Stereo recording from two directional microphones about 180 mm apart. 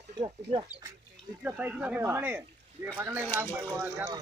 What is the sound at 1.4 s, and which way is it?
Speech, 5° right (ahead or behind).